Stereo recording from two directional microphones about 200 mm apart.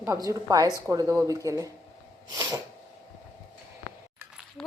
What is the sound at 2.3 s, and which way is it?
Sneeze, 20° right (ahead or behind).